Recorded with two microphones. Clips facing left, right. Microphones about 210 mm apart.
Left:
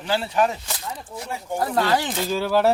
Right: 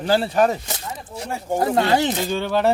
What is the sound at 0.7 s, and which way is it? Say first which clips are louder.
Speech: right 1 dB; 25° right (ahead or behind).